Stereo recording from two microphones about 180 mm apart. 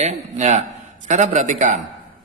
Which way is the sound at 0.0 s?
40° right (ahead or behind).